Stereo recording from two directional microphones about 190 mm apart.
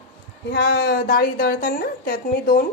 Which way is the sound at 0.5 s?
55° left (ahead or behind).